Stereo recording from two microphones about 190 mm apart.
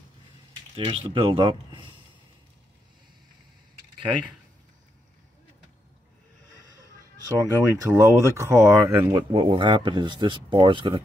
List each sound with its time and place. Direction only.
0.7 s speech: 25° right (ahead or behind)
7.3 s speech: 15° right (ahead or behind)
9.3 s speech: 30° right (ahead or behind)